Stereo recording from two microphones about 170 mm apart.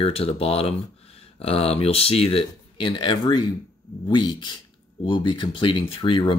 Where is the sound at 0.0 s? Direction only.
35° left (ahead or behind).